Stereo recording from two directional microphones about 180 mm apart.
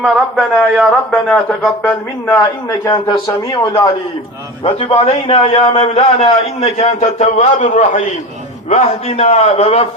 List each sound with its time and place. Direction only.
0.0 s a man's voice: centre (ahead or behind); by 3.9 s 20° left (ahead or behind)
4.6 s a man's voice: 35° left (ahead or behind)